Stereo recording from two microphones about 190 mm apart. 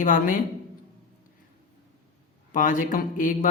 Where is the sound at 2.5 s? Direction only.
45° left (ahead or behind).